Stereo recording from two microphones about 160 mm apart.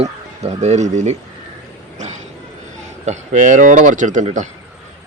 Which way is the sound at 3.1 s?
50° right (ahead or behind).